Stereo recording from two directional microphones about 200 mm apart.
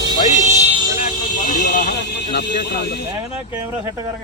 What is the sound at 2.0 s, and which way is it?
Speech, 55° left (ahead or behind).